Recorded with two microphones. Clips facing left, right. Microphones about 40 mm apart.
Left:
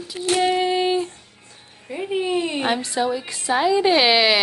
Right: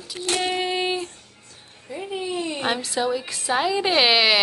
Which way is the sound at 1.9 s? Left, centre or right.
Left.